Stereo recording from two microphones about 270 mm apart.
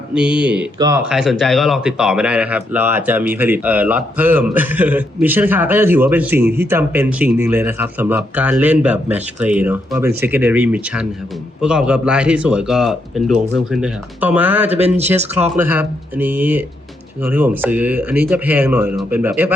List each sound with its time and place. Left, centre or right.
0.1 s speech: centre
14.8 s speech: right
15.4 s speech: centre